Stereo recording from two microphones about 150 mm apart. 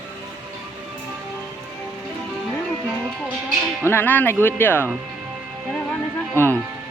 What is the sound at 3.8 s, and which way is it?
Speech, 15° left (ahead or behind).